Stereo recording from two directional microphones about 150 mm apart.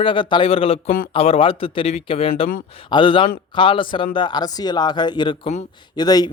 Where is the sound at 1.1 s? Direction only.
40° left (ahead or behind).